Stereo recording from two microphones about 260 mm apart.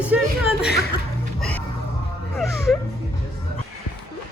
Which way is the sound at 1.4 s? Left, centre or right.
Centre.